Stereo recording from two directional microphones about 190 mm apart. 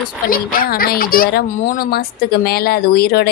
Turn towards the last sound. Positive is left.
turn(degrees=55)  # may be behind; listen again after turning